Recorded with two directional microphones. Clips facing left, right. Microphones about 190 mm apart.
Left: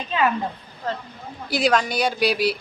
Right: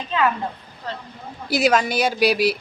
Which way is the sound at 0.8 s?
45° left (ahead or behind).